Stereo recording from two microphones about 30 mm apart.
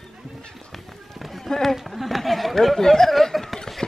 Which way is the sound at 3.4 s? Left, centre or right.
Centre.